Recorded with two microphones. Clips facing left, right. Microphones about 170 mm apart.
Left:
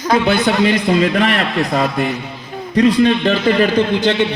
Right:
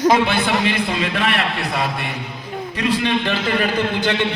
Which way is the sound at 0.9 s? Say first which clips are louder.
Left 6 dB; 35° left (ahead or behind).